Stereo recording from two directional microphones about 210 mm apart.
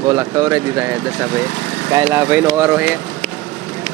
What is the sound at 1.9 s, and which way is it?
Speech, 15° right (ahead or behind).